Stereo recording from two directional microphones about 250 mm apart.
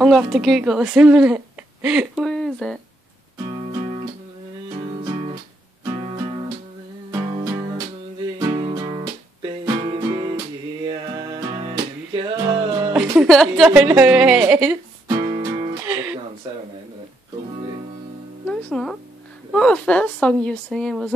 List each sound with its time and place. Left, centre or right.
0.0 s speech: centre
7.1 s music: centre
12.9 s a woman's voice: centre
15.0 s music: centre
18.5 s a woman's voice: centre